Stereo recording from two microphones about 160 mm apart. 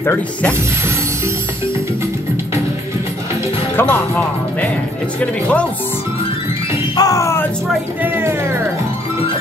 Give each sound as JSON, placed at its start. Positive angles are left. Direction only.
{"t": 0.0, "sound": "mechanisms", "side_deg": 10}
{"t": 3.7, "sound": "speech", "side_deg": 15}
{"t": 5.2, "sound": "mechanisms", "side_deg": 10}
{"t": 7.0, "sound": "music", "side_deg": 20}
{"t": 8.0, "sound": "speech", "side_deg": -15}